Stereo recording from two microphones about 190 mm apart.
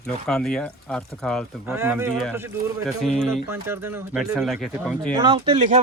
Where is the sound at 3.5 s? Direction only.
10° right (ahead or behind).